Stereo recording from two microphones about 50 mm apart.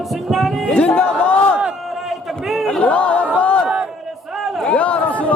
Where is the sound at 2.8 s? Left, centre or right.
Left.